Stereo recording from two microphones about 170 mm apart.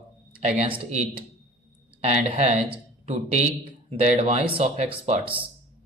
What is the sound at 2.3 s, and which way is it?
Speech, 35° right (ahead or behind).